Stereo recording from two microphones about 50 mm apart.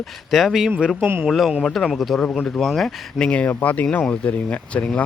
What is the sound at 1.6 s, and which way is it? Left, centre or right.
Speech, centre.